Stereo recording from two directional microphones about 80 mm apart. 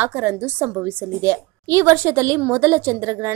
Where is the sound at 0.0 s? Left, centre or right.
Right.